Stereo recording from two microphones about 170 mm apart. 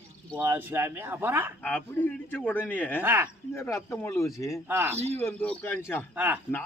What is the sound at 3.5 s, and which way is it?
A man's voice, 15° left (ahead or behind).